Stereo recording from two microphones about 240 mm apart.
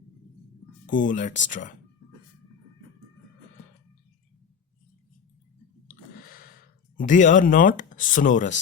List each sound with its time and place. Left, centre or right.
0.9 s speech: left
6.2 s a sound: left
6.9 s speech: left